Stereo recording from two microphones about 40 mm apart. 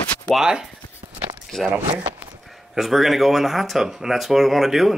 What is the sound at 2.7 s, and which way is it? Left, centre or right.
Speech, centre.